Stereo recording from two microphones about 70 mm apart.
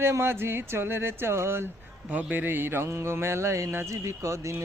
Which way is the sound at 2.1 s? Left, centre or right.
Right.